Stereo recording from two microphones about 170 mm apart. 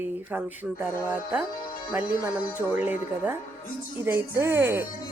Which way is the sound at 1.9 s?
10° right (ahead or behind).